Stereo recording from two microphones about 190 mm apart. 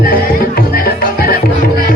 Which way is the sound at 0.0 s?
50° left (ahead or behind).